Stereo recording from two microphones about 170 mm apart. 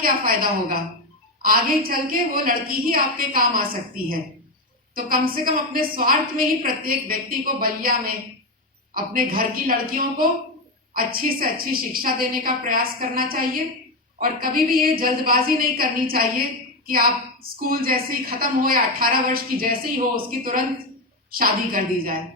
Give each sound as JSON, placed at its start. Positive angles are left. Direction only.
{"t": 0.0, "sound": "a woman's voice", "side_deg": -60}